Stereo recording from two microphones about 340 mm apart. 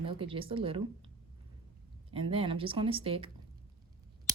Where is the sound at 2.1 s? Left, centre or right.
Centre.